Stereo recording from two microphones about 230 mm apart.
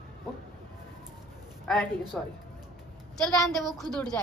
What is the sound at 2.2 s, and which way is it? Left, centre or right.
A woman's voice, centre.